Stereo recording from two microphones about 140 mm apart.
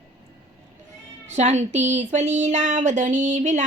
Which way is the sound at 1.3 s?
55° right (ahead or behind).